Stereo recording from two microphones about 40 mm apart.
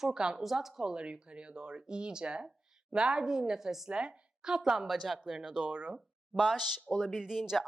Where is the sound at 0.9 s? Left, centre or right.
Right; by 3.9 s centre.